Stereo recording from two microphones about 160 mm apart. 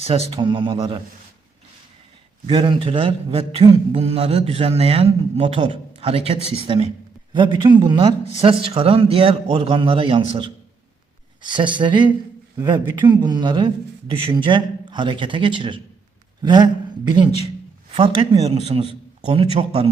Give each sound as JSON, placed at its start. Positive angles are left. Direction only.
{"t": 0.3, "sound": "speech", "side_deg": -30}
{"t": 2.5, "sound": "speech", "side_deg": -30}
{"t": 11.4, "sound": "speech", "side_deg": -30}